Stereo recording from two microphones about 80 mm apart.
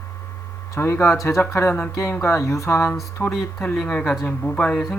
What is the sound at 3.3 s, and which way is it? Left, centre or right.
Speech, centre.